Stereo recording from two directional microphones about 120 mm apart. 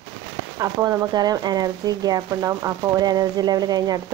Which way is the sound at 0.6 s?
30° right (ahead or behind).